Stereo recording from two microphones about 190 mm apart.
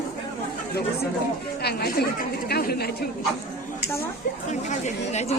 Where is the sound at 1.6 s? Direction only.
55° left (ahead or behind).